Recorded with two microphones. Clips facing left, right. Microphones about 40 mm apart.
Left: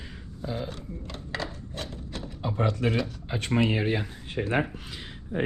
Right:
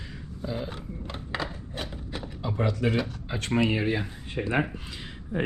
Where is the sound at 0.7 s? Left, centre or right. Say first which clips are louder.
Right 1 dB; centre.